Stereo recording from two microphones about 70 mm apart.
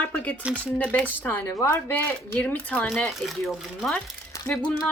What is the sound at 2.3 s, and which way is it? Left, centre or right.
Speech, left.